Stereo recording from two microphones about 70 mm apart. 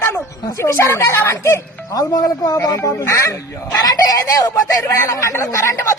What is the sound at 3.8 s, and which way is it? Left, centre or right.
Speech, left.